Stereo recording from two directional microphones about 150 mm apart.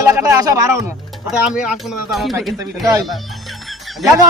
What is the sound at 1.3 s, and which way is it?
Speech, 5° right (ahead or behind).